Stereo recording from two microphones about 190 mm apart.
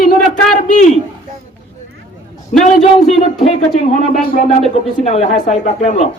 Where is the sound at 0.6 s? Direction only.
35° left (ahead or behind).